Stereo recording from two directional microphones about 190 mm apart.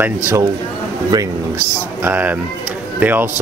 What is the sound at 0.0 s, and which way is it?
Speech, 10° right (ahead or behind).